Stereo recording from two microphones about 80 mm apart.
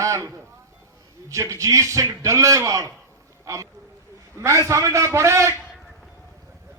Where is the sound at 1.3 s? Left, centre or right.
Right.